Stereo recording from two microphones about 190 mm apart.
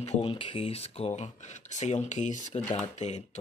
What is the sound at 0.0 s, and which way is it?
Speech, 30° left (ahead or behind).